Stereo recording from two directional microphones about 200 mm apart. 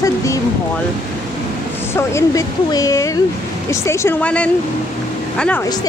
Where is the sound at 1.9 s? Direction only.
15° left (ahead or behind).